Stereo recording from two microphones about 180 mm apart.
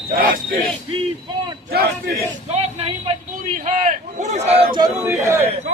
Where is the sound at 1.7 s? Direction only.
60° right (ahead or behind).